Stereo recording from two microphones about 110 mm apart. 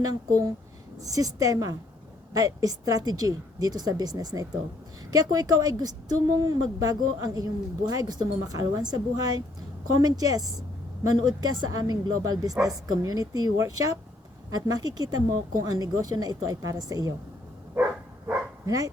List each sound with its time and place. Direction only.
0.0 s a woman's voice: 35° right (ahead or behind)
18.6 s speech: 30° right (ahead or behind)